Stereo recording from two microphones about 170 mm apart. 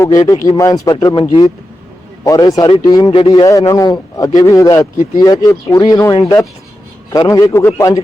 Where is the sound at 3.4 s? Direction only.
20° left (ahead or behind).